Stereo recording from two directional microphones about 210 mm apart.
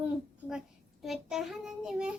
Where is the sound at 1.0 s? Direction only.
Centre (ahead or behind).